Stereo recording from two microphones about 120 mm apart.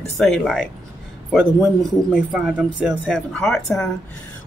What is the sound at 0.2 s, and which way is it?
A man's voice, 5° left (ahead or behind).